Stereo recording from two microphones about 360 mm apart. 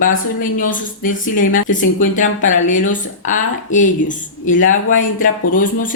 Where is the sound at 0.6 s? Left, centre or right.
Left.